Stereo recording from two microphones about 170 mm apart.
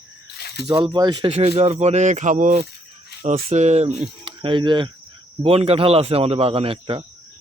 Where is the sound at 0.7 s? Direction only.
25° right (ahead or behind).